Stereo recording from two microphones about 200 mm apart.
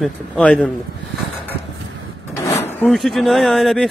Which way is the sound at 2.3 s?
15° left (ahead or behind).